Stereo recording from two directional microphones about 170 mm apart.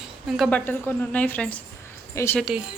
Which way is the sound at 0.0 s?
Centre (ahead or behind).